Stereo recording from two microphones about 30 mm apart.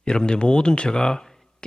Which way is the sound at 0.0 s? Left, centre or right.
Left.